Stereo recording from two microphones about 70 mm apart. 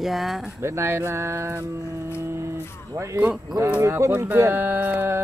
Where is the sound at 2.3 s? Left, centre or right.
Right.